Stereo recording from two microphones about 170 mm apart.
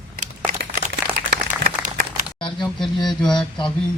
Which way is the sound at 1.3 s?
55° right (ahead or behind).